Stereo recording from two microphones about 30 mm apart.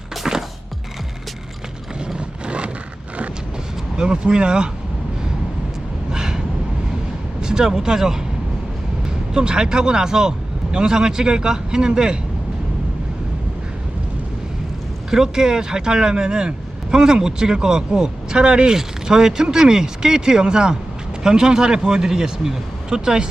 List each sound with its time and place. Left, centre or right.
0.2 s music: centre
2.1 s a sound: right
3.9 s speech: right
6.1 s a sound: right
7.4 s vehicle: right
7.7 s speech: centre
15.1 s speech: centre
18.7 s speech: centre